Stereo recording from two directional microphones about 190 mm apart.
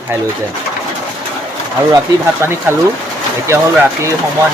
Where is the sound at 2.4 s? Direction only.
10° right (ahead or behind).